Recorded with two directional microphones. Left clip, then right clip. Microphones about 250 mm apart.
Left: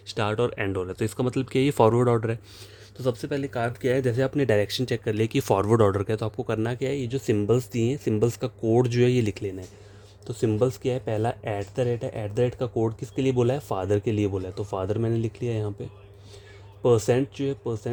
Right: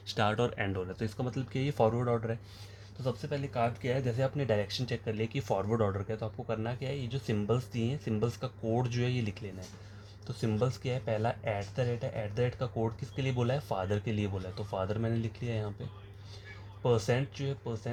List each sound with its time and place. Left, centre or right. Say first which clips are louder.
0.1 s speech: left 5 dB; left
16.8 s speech: left 9 dB; left